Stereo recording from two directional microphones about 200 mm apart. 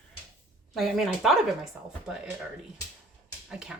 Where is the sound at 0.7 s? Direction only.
Centre (ahead or behind).